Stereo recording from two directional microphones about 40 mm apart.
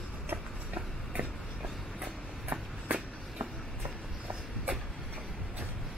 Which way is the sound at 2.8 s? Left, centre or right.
Right.